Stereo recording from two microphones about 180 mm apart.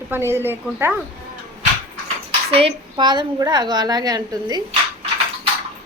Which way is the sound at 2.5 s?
35° right (ahead or behind).